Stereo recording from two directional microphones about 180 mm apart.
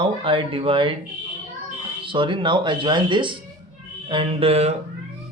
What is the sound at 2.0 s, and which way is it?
A man's voice, 25° right (ahead or behind).